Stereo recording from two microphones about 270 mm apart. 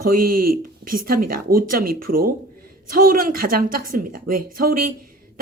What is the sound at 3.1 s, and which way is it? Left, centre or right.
Speech, right.